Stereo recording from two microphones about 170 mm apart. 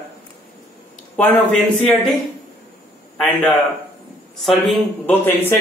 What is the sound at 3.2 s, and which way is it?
Speech, centre (ahead or behind).